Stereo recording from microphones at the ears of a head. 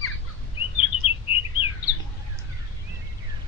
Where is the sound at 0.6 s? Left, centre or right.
Left.